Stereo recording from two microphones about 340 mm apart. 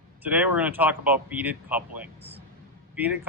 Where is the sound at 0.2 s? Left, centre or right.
Centre.